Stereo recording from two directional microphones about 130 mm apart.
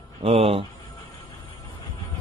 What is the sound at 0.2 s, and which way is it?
Speech, 50° right (ahead or behind).